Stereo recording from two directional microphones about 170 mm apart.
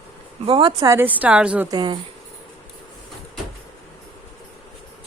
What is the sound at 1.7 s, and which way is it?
Speech, 25° right (ahead or behind).